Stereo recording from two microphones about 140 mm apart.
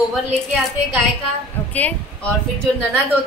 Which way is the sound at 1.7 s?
10° left (ahead or behind).